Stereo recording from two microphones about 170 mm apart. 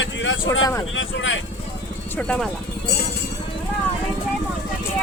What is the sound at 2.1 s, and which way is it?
Speech, 5° left (ahead or behind).